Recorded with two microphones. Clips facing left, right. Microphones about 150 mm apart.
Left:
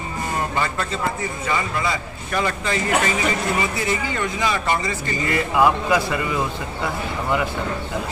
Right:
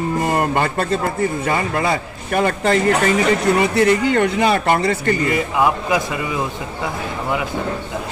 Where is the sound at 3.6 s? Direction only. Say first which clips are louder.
Right 9 dB; 70° right (ahead or behind).